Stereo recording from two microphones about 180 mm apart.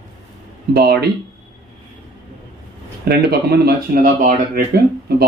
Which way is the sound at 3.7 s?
50° right (ahead or behind).